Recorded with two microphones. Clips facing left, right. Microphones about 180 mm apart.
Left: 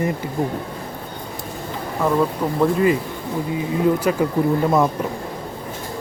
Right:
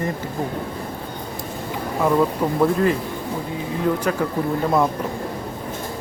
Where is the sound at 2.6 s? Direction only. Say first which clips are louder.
Left 2 dB; 5° left (ahead or behind).